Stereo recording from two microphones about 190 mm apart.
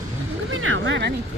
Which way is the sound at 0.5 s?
90° right.